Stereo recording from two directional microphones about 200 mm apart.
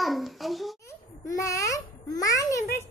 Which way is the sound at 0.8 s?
15° left (ahead or behind).